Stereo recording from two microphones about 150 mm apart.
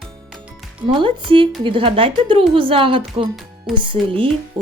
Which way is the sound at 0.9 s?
35° right (ahead or behind).